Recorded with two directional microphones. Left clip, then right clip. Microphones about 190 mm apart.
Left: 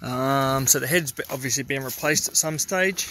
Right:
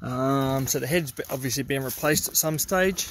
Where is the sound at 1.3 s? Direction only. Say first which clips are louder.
Left 1 dB; 20° right (ahead or behind).